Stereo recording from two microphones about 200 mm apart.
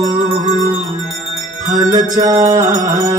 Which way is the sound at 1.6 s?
20° right (ahead or behind).